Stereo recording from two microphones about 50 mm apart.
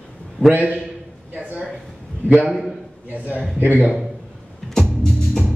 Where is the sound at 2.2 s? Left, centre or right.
Right.